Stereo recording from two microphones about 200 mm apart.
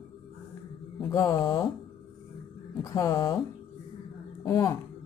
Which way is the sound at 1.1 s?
20° left (ahead or behind).